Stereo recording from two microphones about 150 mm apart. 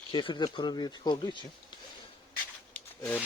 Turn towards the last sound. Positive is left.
turn(degrees=15)  # may be behind; listen again after turning